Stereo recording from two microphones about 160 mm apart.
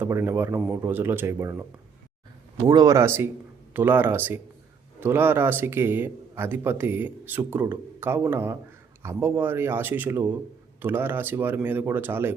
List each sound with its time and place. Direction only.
0.0 s speech: 15° right (ahead or behind)
2.6 s speech: 25° right (ahead or behind)